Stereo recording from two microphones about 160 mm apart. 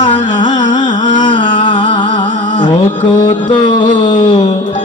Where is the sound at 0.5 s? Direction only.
50° left (ahead or behind).